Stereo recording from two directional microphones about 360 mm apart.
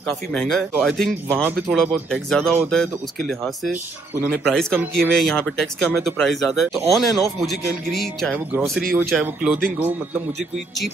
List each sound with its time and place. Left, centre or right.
0.3 s speech: centre